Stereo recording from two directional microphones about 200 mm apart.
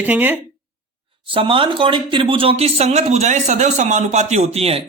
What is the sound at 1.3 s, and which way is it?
Speech, 25° right (ahead or behind).